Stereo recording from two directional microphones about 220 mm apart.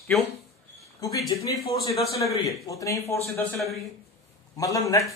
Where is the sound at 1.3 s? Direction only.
15° left (ahead or behind).